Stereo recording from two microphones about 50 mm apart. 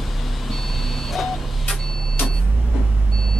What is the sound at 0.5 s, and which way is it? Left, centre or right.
Vehicle, centre.